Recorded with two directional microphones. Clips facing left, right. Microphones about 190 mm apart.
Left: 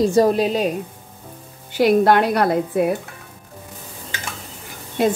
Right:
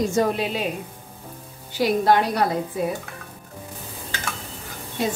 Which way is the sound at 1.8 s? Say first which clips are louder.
Left 4 dB; 60° left (ahead or behind).